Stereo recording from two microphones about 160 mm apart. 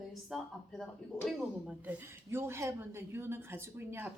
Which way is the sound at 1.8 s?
15° right (ahead or behind).